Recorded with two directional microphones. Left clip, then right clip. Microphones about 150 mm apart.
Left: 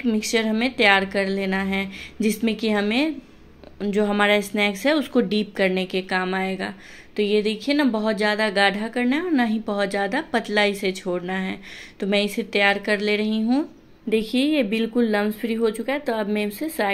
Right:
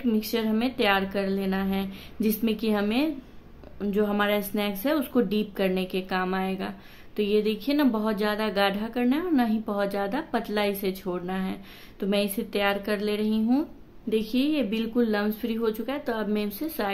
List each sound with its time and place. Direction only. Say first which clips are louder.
0.0 s speech: left 5 dB; 10° left (ahead or behind)